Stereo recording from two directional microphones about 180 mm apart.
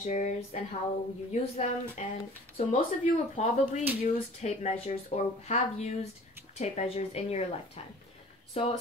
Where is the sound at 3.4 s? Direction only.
40° left (ahead or behind).